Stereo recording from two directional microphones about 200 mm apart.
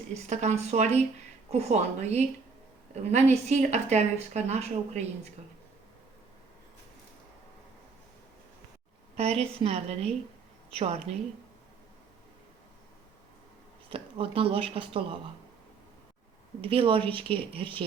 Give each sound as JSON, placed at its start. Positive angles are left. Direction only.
{"t": 0.1, "sound": "a woman's voice", "side_deg": -35}
{"t": 9.1, "sound": "a woman's voice", "side_deg": -30}
{"t": 13.9, "sound": "speech", "side_deg": -30}
{"t": 16.6, "sound": "speech", "side_deg": -25}